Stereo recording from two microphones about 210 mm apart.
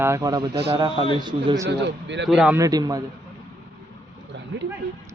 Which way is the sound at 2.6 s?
15° right (ahead or behind).